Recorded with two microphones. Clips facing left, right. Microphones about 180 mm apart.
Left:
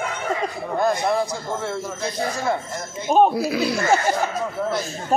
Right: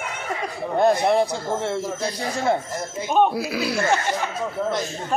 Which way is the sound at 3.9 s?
40° left (ahead or behind).